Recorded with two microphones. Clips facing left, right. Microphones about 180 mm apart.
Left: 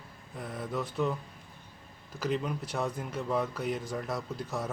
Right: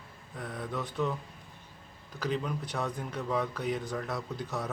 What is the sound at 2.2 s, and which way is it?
Speech, centre (ahead or behind).